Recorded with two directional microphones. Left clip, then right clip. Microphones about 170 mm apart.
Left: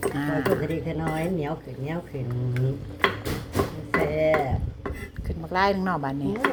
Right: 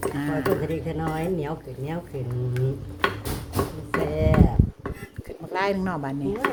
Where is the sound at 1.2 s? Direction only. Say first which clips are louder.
Even; 35° right (ahead or behind).